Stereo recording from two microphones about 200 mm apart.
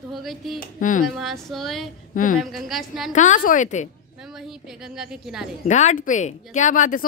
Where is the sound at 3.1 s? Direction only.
40° left (ahead or behind).